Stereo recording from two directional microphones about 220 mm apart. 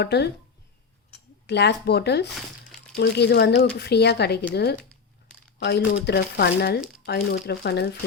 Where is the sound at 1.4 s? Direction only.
50° left (ahead or behind).